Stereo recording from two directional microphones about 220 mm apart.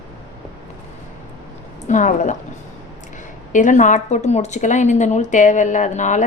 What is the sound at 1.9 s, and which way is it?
Speech, 35° left (ahead or behind).